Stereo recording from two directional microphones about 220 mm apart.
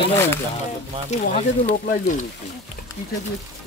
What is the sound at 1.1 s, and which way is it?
Speech, 35° left (ahead or behind).